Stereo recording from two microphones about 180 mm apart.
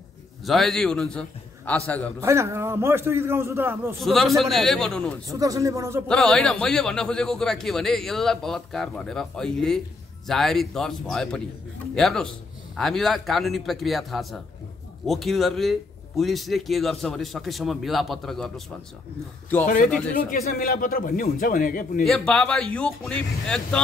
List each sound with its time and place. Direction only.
0.5 s a man's voice: centre (ahead or behind)
2.1 s a man's voice: 15° right (ahead or behind)
4.0 s a man's voice: centre (ahead or behind)
5.3 s a man's voice: 20° right (ahead or behind)
6.0 s a man's voice: 5° left (ahead or behind)
19.6 s a man's voice: 50° left (ahead or behind)
22.0 s a man's voice: 5° left (ahead or behind)